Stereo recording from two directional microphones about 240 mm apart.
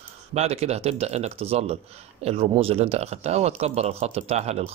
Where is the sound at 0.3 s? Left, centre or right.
Right.